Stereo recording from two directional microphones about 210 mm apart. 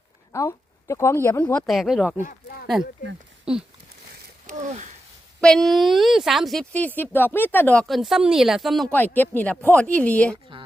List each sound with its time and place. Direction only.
0.3 s speech: 15° left (ahead or behind)
1.6 s speech: centre (ahead or behind)
2.2 s a sound: 45° left (ahead or behind)
3.5 s speech: 5° right (ahead or behind)
4.5 s speech: 35° right (ahead or behind)
5.4 s speech: 5° left (ahead or behind)
10.5 s dishes: 25° right (ahead or behind)